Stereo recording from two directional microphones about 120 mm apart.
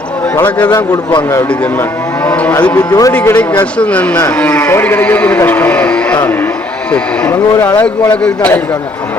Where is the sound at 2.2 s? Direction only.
15° left (ahead or behind).